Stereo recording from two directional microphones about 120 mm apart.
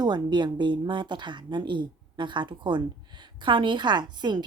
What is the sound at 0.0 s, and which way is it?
Speech, 35° right (ahead or behind).